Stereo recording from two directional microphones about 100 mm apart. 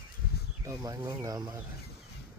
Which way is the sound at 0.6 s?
35° right (ahead or behind).